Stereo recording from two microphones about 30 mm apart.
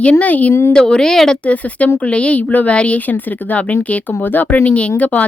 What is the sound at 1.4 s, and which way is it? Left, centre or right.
A woman's voice, left.